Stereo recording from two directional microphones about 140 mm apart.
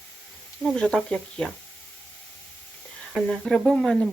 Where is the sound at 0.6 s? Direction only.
5° left (ahead or behind).